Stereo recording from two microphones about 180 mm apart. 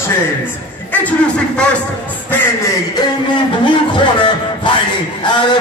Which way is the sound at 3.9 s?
25° left (ahead or behind).